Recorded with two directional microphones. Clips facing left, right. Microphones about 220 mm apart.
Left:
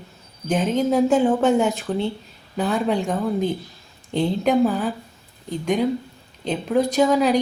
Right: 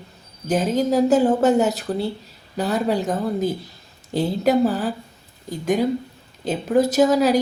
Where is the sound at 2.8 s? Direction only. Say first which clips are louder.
Even; 5° right (ahead or behind).